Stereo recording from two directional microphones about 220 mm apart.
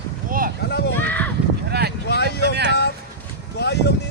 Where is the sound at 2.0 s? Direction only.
50° left (ahead or behind).